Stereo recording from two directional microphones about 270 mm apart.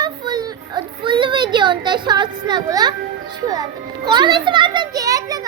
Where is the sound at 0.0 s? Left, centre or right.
Centre.